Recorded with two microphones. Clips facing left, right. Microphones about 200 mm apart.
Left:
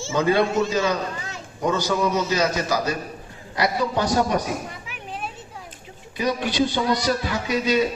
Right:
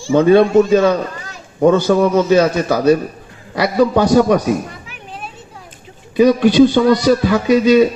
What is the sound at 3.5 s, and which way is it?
Speech, 65° right (ahead or behind).